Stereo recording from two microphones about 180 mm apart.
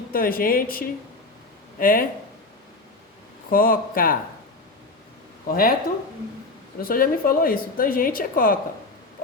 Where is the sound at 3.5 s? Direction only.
55° left (ahead or behind).